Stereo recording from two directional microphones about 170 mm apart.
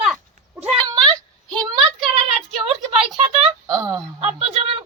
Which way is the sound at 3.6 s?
20° right (ahead or behind).